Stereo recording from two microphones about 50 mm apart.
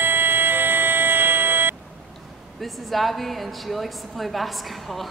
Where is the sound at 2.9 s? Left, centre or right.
Centre.